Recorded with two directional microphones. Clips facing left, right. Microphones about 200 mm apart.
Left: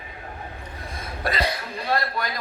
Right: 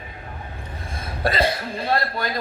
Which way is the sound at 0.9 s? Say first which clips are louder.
Right 4 dB; 30° right (ahead or behind).